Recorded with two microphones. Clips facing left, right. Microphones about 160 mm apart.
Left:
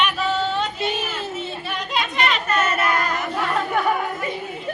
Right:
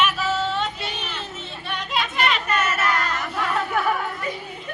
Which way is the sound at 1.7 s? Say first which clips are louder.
Right 1 dB; centre (ahead or behind).